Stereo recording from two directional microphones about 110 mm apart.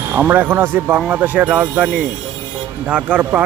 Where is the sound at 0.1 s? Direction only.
20° right (ahead or behind).